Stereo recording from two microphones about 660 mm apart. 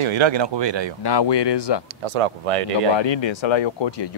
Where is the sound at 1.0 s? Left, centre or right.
Left.